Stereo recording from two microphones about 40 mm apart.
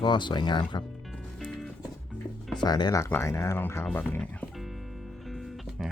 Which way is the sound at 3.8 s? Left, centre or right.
Left.